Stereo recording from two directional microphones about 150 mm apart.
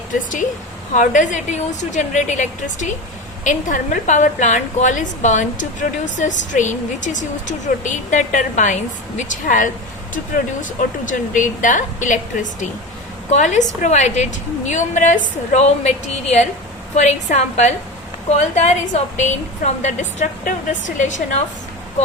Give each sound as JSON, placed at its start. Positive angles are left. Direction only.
{"t": 0.9, "sound": "a woman's voice", "side_deg": 55}